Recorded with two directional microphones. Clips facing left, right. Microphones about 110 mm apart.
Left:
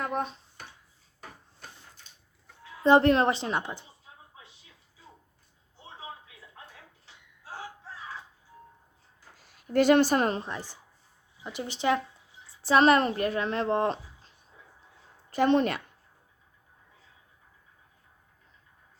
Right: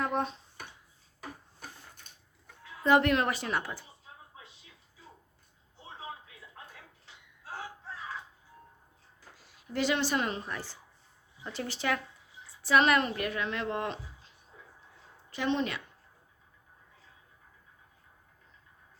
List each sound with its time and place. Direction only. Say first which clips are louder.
0.0 s a sound: even; centre (ahead or behind)
2.8 s speech: left 5 dB; 30° left (ahead or behind)
9.7 s a woman's voice: left 8 dB; 50° left (ahead or behind)
10.4 s speech: left 2 dB; 20° left (ahead or behind); by 14.3 s 35° left (ahead or behind)
15.3 s a woman's voice: left 7 dB; 50° left (ahead or behind)